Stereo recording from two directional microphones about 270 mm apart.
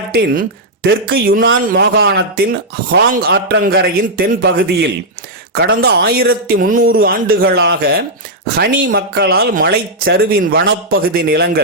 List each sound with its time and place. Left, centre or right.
0.1 s speech: right